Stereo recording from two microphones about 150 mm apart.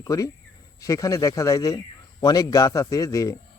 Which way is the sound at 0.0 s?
20° left (ahead or behind).